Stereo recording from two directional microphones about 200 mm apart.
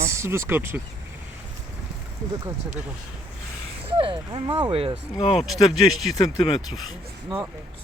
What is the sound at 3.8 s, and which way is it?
Speech, 25° right (ahead or behind).